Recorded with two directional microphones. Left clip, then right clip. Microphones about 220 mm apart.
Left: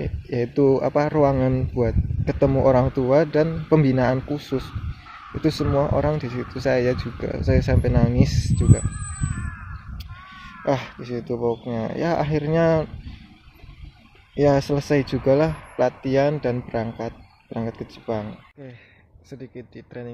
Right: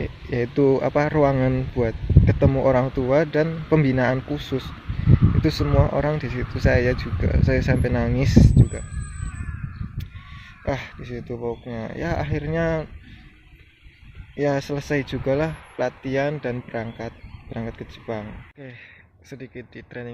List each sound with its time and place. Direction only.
0.0 s speech: 10° left (ahead or behind)
9.9 s a sound: 5° left (ahead or behind)
11.6 s speech: 5° left (ahead or behind)
14.3 s speech: 5° left (ahead or behind)